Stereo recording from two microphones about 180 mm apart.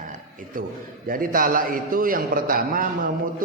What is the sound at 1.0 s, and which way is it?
A man's voice, 50° right (ahead or behind).